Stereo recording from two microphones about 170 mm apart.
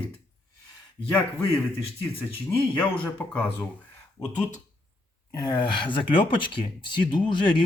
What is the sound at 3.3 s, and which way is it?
Speech, 10° left (ahead or behind).